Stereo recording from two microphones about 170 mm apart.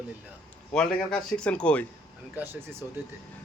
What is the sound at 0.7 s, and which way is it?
A man's voice, 5° left (ahead or behind).